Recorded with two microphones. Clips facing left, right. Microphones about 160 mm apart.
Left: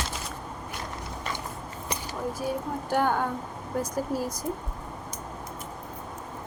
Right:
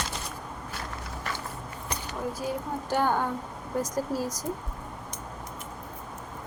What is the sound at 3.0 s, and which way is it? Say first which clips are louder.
Speech: even; 10° right (ahead or behind).